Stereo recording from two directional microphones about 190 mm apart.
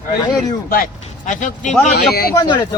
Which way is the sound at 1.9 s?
55° left (ahead or behind).